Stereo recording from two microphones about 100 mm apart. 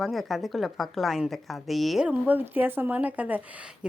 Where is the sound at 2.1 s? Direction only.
15° right (ahead or behind).